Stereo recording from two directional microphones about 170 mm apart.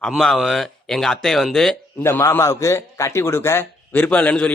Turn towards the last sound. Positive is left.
turn(degrees=10)  # may be behind; listen again after turning